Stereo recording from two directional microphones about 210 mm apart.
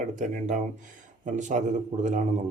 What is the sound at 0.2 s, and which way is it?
Speech, 35° right (ahead or behind).